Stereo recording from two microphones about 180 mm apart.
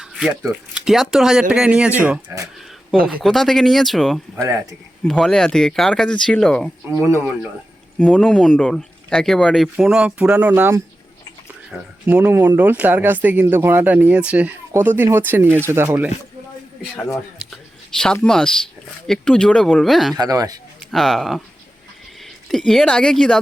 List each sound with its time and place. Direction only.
0.0 s a sound: 5° right (ahead or behind)
0.7 s speech: centre (ahead or behind)
4.4 s speech: 15° right (ahead or behind)
5.0 s speech: 5° left (ahead or behind)
11.7 s speech: centre (ahead or behind)
17.4 s a sound: centre (ahead or behind)
19.0 s speech: 5° left (ahead or behind)
20.1 s speech: 20° right (ahead or behind)
20.9 s speech: centre (ahead or behind)
22.4 s speech: centre (ahead or behind)